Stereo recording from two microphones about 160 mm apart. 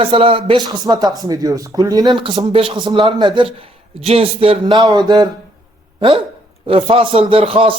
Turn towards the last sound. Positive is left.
turn(degrees=-35)  # may be behind; listen again after turning